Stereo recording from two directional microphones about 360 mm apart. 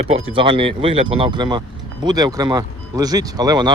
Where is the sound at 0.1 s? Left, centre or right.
Centre.